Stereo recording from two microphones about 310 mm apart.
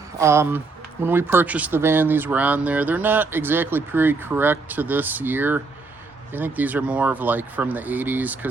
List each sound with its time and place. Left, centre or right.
0.2 s speech: centre